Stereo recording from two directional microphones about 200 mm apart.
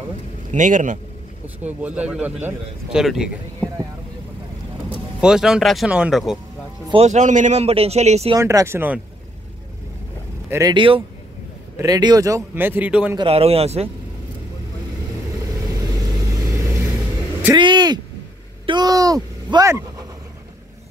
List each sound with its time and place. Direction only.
0.5 s a man's voice: 40° right (ahead or behind)
1.6 s a man's voice: 10° right (ahead or behind)
4.8 s speech: 5° right (ahead or behind)
6.9 s a man's voice: 30° right (ahead or behind)
8.4 s a man's voice: 15° right (ahead or behind)
10.5 s a man's voice: 20° right (ahead or behind)
13.2 s a man's voice: 30° right (ahead or behind)
17.6 s speech: 20° right (ahead or behind)